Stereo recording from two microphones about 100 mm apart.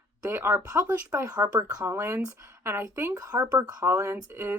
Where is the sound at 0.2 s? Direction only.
25° right (ahead or behind).